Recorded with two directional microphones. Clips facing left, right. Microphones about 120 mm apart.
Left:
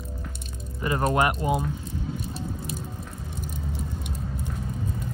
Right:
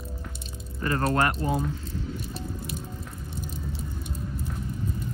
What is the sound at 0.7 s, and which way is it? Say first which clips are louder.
Speech: left 1 dB; 15° left (ahead or behind).